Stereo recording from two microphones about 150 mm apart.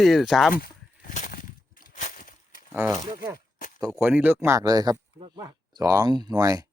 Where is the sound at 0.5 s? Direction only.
80° left.